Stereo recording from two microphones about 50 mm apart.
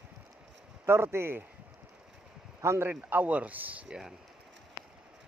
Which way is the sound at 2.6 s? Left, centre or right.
Right.